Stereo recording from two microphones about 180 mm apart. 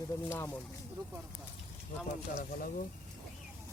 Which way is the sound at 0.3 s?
15° left (ahead or behind).